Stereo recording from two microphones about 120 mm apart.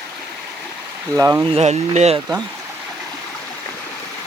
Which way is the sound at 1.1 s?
25° right (ahead or behind).